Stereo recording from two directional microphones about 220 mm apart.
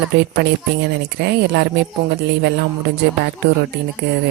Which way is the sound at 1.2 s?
50° right (ahead or behind).